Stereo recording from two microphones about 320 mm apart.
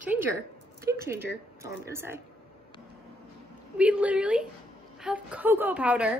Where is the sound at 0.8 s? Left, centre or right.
Centre.